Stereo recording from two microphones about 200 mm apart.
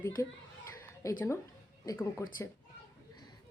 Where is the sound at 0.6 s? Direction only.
15° left (ahead or behind).